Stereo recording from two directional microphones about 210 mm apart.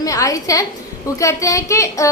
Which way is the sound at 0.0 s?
15° left (ahead or behind).